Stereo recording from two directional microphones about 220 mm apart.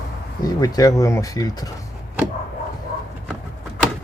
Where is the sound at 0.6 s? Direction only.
15° left (ahead or behind).